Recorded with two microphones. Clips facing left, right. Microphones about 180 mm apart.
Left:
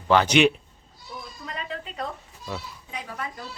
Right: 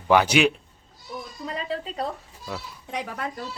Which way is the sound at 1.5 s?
30° right (ahead or behind).